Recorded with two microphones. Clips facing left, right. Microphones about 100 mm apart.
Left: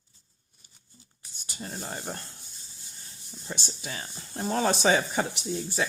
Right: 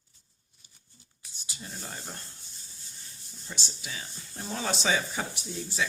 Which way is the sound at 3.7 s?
45° left (ahead or behind).